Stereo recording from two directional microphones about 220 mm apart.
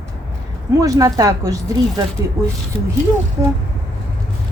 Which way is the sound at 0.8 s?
15° right (ahead or behind).